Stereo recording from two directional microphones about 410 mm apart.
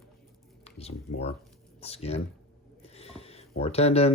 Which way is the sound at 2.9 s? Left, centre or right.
Centre.